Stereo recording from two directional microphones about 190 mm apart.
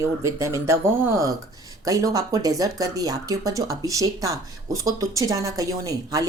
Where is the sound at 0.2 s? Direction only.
15° right (ahead or behind).